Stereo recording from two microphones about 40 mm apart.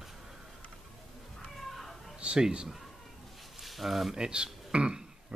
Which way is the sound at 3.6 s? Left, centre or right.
Centre.